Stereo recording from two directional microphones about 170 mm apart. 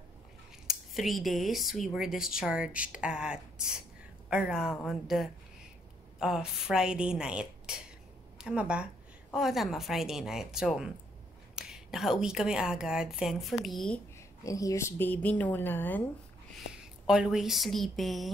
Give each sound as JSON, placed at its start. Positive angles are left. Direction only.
{"t": 0.7, "sound": "a woman's voice", "side_deg": 0}
{"t": 14.4, "sound": "a woman's voice", "side_deg": 20}
{"t": 16.5, "sound": "speech", "side_deg": -5}